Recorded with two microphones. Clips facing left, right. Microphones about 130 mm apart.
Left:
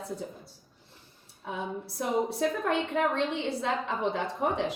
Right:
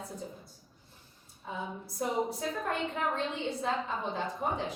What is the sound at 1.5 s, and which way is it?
A woman's voice, 75° left (ahead or behind).